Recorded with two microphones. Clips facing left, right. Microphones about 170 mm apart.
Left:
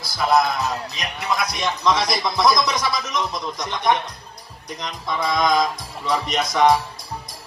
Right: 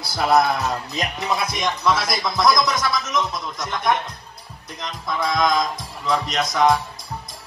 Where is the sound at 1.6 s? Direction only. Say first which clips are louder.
Left 2 dB; 5° right (ahead or behind).